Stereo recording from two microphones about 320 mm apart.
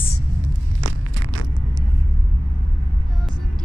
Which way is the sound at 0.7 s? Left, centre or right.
Right.